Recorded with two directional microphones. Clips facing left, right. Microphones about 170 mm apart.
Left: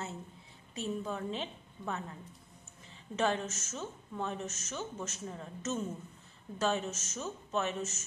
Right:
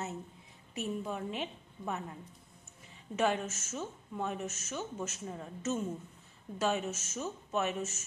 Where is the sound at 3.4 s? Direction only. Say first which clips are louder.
Even; 40° left (ahead or behind).